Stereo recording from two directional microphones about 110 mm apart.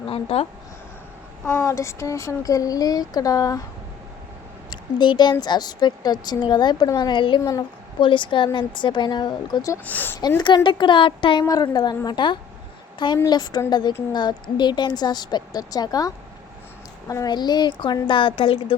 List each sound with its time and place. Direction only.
0.1 s speech: 65° left (ahead or behind)
1.5 s speech: 25° left (ahead or behind)
4.7 s speech: 40° left (ahead or behind)
9.8 s a woman's voice: 15° left (ahead or behind)
10.2 s speech: 40° left (ahead or behind)
11.4 s speech: 35° left (ahead or behind); by 18.8 s 55° left (ahead or behind)